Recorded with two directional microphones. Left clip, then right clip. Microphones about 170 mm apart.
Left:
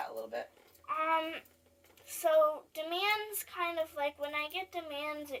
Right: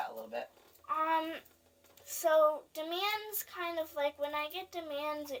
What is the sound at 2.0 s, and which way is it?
Speech, 35° right (ahead or behind).